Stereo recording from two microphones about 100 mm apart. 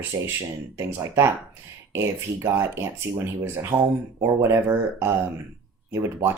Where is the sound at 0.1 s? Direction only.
30° right (ahead or behind).